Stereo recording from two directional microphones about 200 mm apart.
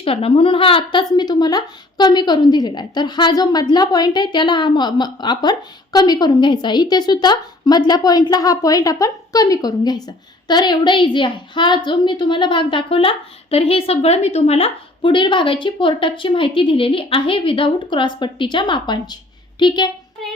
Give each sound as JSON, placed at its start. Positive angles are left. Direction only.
{"t": 0.0, "sound": "a woman's voice", "side_deg": 30}